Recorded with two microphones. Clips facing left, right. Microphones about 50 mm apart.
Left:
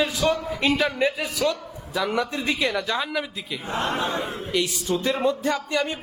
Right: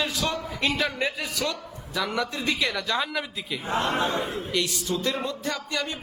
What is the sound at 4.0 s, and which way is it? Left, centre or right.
A man's voice, left.